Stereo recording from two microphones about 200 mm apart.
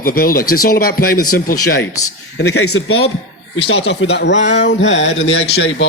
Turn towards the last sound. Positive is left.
turn(degrees=70)  # may be behind; listen again after turning